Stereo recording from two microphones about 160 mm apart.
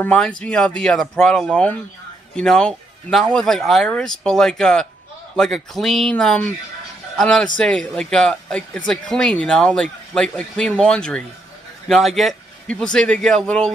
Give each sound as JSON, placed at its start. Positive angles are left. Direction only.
{"t": 0.0, "sound": "a man's voice", "side_deg": 10}